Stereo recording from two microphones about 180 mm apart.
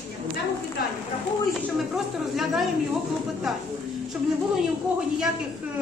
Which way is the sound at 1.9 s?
Centre (ahead or behind).